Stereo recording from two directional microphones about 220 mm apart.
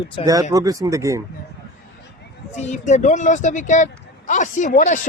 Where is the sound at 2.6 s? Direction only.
30° left (ahead or behind).